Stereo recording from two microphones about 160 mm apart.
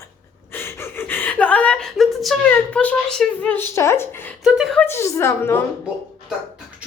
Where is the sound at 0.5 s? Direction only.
15° left (ahead or behind).